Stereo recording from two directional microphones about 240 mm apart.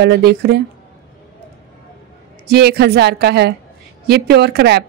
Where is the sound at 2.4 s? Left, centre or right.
Right.